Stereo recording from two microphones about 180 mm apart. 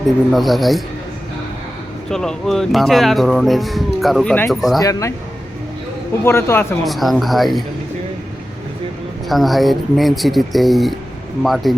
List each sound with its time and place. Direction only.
0.3 s speech: centre (ahead or behind)
2.0 s speech: 5° left (ahead or behind)
4.8 s speech: 20° left (ahead or behind)
6.2 s a man's voice: 15° left (ahead or behind)
6.8 s speech: centre (ahead or behind)
9.3 s speech: centre (ahead or behind)